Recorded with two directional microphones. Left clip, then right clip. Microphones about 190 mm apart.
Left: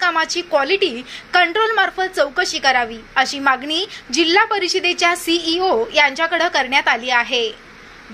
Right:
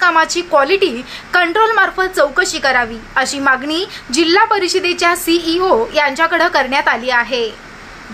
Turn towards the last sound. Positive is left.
turn(degrees=10)  # may be behind; listen again after turning